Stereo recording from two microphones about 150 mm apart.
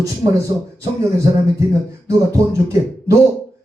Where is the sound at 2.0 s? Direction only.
20° right (ahead or behind).